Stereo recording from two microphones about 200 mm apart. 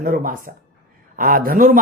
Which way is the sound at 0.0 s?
45° right (ahead or behind).